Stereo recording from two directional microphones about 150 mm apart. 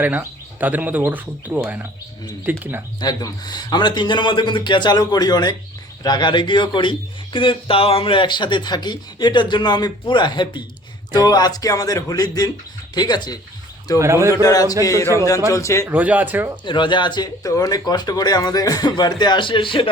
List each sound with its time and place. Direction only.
0.0 s speech: 10° right (ahead or behind)
3.0 s speech: 25° left (ahead or behind)
14.0 s a man's voice: 20° right (ahead or behind)
14.4 s speech: 25° left (ahead or behind)
15.9 s speech: 10° right (ahead or behind)
16.6 s speech: 30° left (ahead or behind)